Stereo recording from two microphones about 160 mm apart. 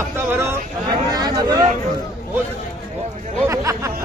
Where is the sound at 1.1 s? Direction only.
25° right (ahead or behind).